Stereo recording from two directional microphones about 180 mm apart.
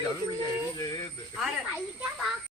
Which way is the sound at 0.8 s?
20° left (ahead or behind).